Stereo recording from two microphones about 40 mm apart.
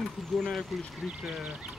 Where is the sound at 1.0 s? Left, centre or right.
Right.